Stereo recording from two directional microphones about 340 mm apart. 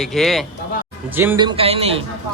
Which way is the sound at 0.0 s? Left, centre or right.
Centre.